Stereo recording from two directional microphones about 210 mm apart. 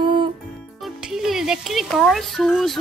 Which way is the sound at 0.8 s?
Centre (ahead or behind).